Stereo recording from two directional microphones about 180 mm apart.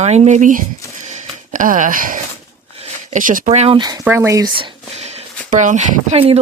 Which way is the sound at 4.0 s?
10° right (ahead or behind).